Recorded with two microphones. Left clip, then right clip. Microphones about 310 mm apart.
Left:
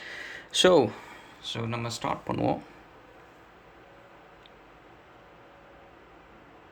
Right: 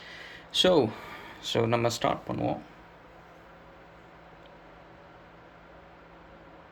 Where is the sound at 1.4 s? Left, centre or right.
Centre.